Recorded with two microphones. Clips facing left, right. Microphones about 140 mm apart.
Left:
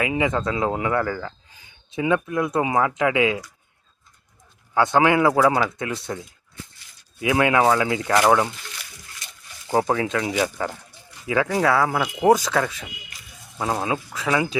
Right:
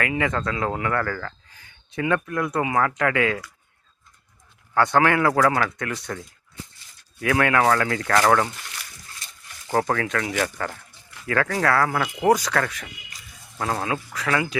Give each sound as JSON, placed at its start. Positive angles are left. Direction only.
{"t": 0.0, "sound": "speech", "side_deg": 15}
{"t": 4.9, "sound": "speech", "side_deg": 15}
{"t": 5.7, "sound": "speech", "side_deg": 25}
{"t": 7.2, "sound": "speech", "side_deg": 15}
{"t": 9.7, "sound": "speech", "side_deg": 15}
{"t": 12.5, "sound": "speech", "side_deg": 10}